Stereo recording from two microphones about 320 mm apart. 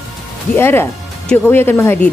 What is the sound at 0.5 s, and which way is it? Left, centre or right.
Speech, centre.